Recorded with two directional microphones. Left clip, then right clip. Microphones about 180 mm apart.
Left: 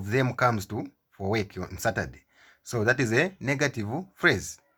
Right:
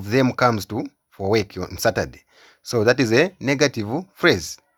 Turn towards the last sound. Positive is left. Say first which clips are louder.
# right 6 dB
turn(degrees=-40)  # may be behind; listen again after turning